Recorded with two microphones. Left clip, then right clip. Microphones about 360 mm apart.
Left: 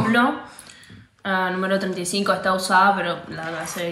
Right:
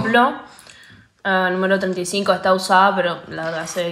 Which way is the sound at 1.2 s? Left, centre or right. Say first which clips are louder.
Right 4 dB; right.